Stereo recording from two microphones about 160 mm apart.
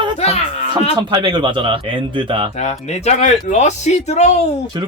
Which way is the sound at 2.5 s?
45° left (ahead or behind).